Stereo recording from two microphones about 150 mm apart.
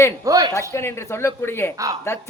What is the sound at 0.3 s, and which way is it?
Speech, 25° right (ahead or behind).